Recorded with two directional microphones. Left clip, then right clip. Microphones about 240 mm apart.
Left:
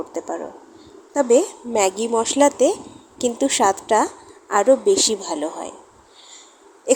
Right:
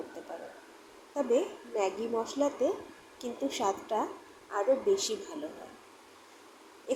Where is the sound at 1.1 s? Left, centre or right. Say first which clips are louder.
Left 13 dB; left.